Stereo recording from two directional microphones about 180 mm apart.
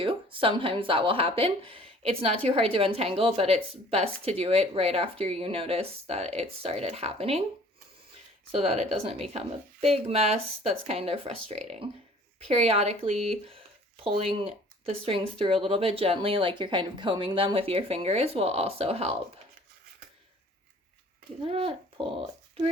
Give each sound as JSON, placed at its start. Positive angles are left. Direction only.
{"t": 0.0, "sound": "speech", "side_deg": -30}
{"t": 8.6, "sound": "speech", "side_deg": -35}
{"t": 21.4, "sound": "speech", "side_deg": -35}